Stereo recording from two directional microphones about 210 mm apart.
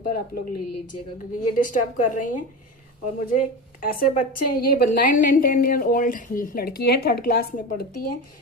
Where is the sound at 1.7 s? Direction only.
40° left (ahead or behind).